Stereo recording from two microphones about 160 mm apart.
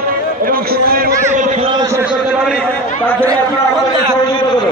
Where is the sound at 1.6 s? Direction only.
25° right (ahead or behind).